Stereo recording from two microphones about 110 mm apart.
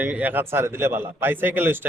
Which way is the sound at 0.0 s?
15° right (ahead or behind).